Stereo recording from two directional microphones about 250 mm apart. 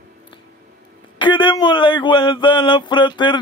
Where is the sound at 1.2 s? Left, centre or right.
Centre.